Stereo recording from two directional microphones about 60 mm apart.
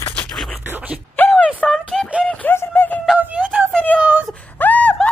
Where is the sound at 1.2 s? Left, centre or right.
Left.